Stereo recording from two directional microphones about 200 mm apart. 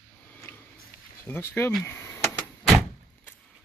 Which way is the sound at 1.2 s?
10° left (ahead or behind).